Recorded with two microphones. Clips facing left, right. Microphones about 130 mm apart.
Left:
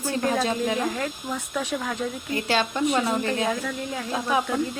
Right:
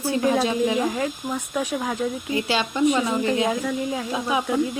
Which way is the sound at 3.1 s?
15° right (ahead or behind).